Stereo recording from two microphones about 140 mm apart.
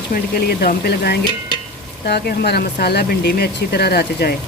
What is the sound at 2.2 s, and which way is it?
Speech, 90° left.